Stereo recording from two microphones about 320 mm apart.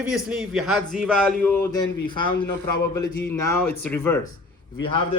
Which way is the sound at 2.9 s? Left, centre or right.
Centre.